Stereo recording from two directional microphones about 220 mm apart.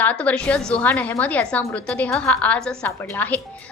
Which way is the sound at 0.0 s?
5° left (ahead or behind).